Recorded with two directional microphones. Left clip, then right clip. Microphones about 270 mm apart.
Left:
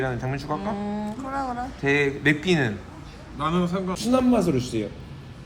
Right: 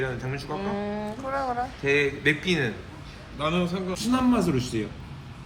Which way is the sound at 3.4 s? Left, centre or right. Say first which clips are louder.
Left 2 dB; centre.